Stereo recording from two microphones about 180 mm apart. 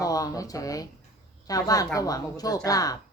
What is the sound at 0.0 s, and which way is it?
Speech, 20° left (ahead or behind).